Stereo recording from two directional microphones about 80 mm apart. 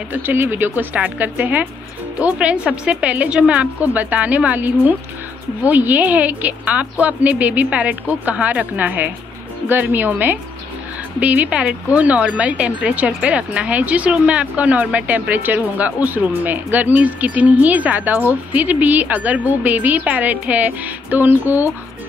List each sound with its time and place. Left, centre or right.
0.1 s a woman's voice: right